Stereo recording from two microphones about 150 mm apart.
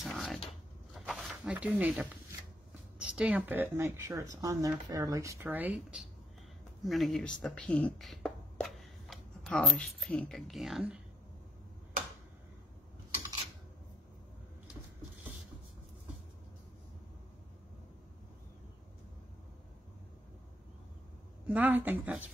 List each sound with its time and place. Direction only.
0.0 s a sound: centre (ahead or behind)
0.9 s zipper: centre (ahead or behind)
3.0 s a woman's voice: 5° right (ahead or behind)
6.8 s speech: centre (ahead or behind)
21.5 s a woman's voice: 10° right (ahead or behind)